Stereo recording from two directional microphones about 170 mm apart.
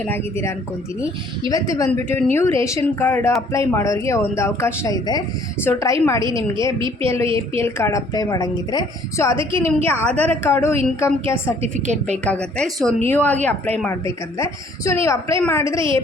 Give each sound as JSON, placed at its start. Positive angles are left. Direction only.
{"t": 0.0, "sound": "a woman's voice", "side_deg": 15}
{"t": 6.7, "sound": "a woman's voice", "side_deg": -30}
{"t": 7.6, "sound": "a woman's voice", "side_deg": 15}
{"t": 11.6, "sound": "a woman's voice", "side_deg": -40}
{"t": 12.2, "sound": "a woman's voice", "side_deg": 5}